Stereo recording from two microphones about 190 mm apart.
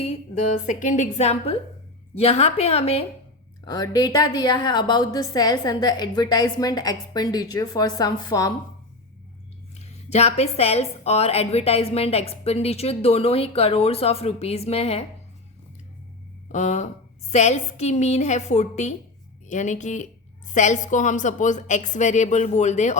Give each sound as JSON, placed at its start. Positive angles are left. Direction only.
{"t": 0.5, "sound": "a woman's voice", "side_deg": 40}
{"t": 3.7, "sound": "a woman's voice", "side_deg": 20}
{"t": 9.7, "sound": "a woman's voice", "side_deg": 35}
{"t": 16.5, "sound": "a woman's voice", "side_deg": 40}